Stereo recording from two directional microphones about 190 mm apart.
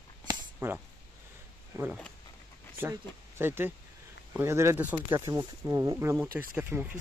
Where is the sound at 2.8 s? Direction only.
10° right (ahead or behind).